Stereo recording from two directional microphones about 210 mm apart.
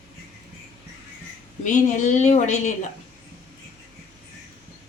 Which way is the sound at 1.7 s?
35° left (ahead or behind).